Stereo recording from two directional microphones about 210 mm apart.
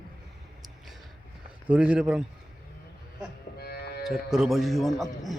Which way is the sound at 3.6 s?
50° left (ahead or behind).